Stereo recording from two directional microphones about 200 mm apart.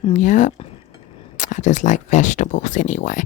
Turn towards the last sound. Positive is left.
turn(degrees=40)  # may be behind; listen again after turning